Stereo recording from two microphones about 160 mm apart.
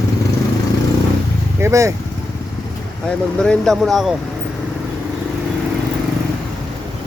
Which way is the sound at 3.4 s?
Centre (ahead or behind).